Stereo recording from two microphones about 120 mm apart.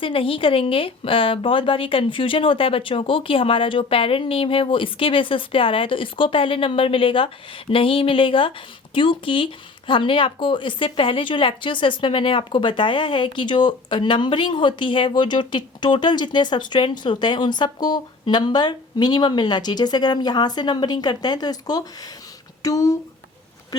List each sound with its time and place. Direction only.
0.0 s speech: 50° left (ahead or behind); by 23.0 s 30° left (ahead or behind)